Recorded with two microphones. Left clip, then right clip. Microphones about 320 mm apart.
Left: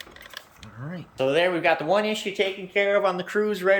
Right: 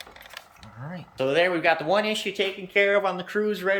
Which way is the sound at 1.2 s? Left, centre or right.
Centre.